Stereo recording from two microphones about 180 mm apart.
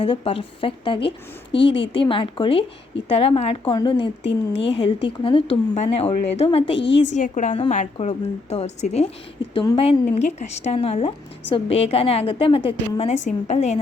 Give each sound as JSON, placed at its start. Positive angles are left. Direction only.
{"t": 0.0, "sound": "a woman's voice", "side_deg": 30}
{"t": 1.7, "sound": "speech", "side_deg": 85}
{"t": 2.0, "sound": "a woman's voice", "side_deg": 30}
{"t": 4.2, "sound": "speech", "side_deg": 85}
{"t": 4.7, "sound": "a woman's voice", "side_deg": 35}
{"t": 6.7, "sound": "speech", "side_deg": 80}
{"t": 7.1, "sound": "a woman's voice", "side_deg": 45}